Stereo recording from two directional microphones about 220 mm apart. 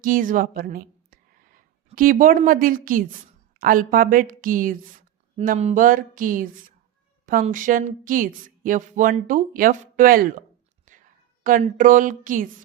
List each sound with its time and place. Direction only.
0.0 s a woman's voice: 40° right (ahead or behind)
10.9 s whispering: 35° right (ahead or behind)
11.4 s a woman's voice: 40° right (ahead or behind)